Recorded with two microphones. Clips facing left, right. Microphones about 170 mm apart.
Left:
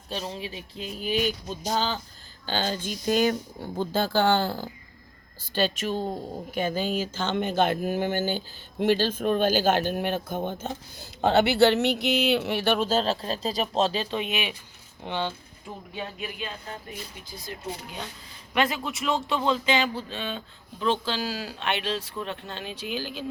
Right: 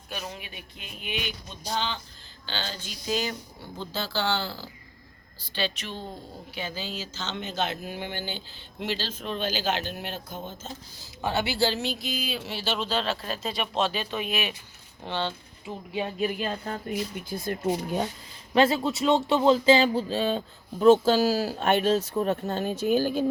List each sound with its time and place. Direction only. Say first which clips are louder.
0.1 s speech: left 5 dB; 30° left (ahead or behind)
16.2 s speech: right 7 dB; 40° right (ahead or behind)
17.2 s speech: right 8 dB; 55° right (ahead or behind)
18.5 s speech: right 5 dB; 25° right (ahead or behind); by 23.2 s 45° right (ahead or behind)